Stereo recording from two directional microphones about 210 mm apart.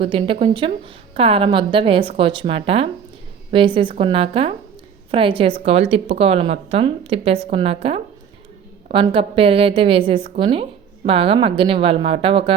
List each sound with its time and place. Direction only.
0.0 s a woman's voice: 25° right (ahead or behind)